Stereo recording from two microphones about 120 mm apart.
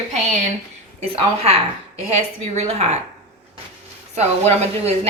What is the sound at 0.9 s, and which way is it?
Speech, 55° right (ahead or behind).